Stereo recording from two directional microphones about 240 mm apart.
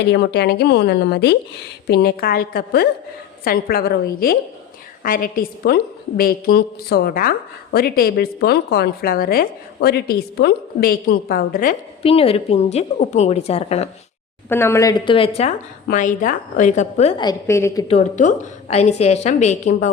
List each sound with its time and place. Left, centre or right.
0.1 s a woman's voice: left
12.0 s a woman's voice: left
14.5 s a woman's voice: centre
17.8 s a woman's voice: left